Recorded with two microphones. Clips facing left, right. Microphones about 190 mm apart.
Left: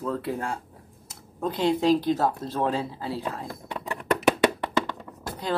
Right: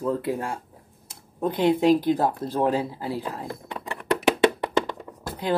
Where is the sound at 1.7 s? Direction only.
10° right (ahead or behind).